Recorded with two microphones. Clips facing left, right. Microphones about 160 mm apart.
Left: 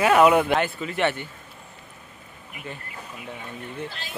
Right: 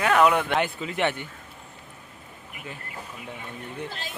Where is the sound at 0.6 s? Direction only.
15° right (ahead or behind).